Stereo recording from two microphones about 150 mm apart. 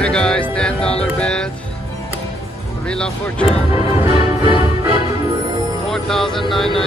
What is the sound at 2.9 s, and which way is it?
Speech, 5° left (ahead or behind).